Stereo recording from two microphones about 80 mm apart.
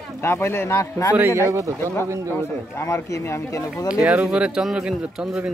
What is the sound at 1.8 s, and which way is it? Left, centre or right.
Speech, left.